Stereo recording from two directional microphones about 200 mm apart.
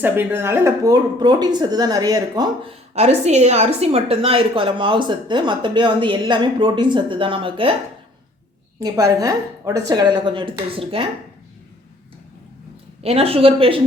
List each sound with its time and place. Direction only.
0.0 s a woman's voice: 10° right (ahead or behind)
2.9 s a woman's voice: 35° right (ahead or behind)
8.8 s a woman's voice: 15° right (ahead or behind)
13.0 s a woman's voice: 30° right (ahead or behind)